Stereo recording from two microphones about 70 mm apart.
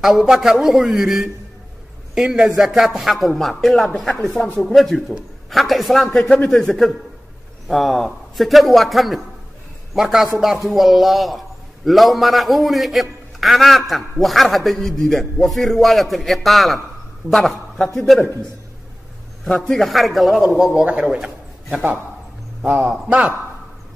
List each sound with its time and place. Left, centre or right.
0.0 s a man's voice: centre
19.4 s a man's voice: centre
22.6 s a man's voice: centre